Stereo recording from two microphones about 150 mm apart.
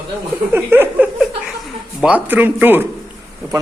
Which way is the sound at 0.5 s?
15° right (ahead or behind).